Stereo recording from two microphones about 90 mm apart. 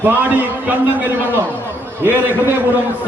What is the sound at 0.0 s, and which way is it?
Speech, 20° right (ahead or behind).